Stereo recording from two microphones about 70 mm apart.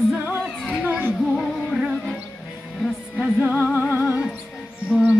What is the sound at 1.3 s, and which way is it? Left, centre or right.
Music, centre.